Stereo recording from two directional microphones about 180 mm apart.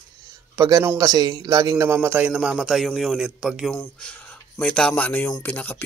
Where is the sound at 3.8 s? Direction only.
10° left (ahead or behind).